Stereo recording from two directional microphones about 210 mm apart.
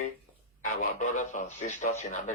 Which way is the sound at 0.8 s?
35° left (ahead or behind).